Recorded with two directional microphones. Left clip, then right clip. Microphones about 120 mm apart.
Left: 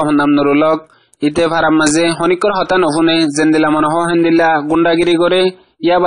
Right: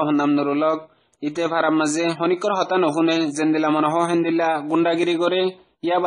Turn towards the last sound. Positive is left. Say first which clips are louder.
# left 9 dB
turn(degrees=30)  # may be behind; listen again after turning